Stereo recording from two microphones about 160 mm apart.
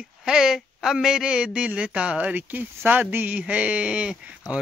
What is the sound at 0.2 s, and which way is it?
Speech, 5° right (ahead or behind).